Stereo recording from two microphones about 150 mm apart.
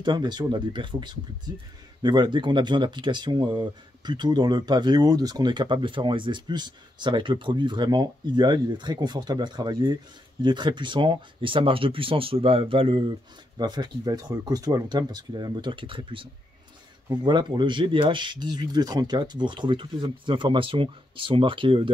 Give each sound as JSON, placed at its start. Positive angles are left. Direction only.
{"t": 0.0, "sound": "speech", "side_deg": -30}